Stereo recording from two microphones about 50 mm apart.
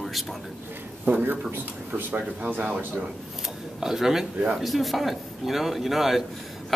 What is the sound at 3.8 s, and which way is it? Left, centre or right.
A man's voice, centre.